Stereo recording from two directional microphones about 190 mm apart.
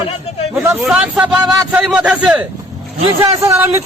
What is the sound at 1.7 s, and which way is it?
A man's voice, 5° right (ahead or behind).